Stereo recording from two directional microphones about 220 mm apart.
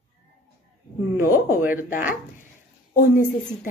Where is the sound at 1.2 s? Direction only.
10° right (ahead or behind).